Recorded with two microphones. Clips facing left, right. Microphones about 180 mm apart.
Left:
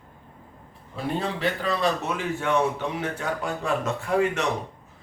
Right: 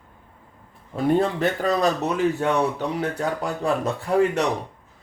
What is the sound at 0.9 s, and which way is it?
A man's voice, 50° right (ahead or behind).